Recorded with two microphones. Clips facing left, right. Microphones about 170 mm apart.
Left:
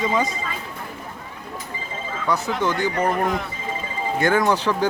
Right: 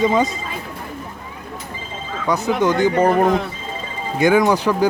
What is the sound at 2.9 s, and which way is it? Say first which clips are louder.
Speech: right 6 dB; 30° right (ahead or behind).